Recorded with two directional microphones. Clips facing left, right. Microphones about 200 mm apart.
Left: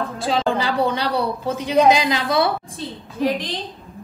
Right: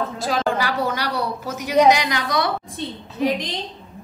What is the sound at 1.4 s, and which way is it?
A woman's voice, 25° left (ahead or behind).